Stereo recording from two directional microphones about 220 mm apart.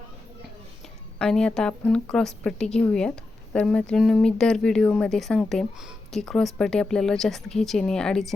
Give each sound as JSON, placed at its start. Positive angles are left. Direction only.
{"t": 1.2, "sound": "speech", "side_deg": 5}